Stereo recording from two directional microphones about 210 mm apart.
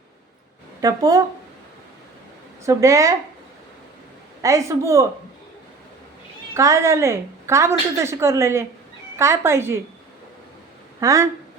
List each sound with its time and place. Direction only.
0.8 s a woman's voice: 15° right (ahead or behind)
2.6 s a woman's voice: 15° right (ahead or behind)
4.4 s a woman's voice: 15° right (ahead or behind)
6.5 s a woman's voice: 15° right (ahead or behind)
11.0 s a woman's voice: 15° right (ahead or behind)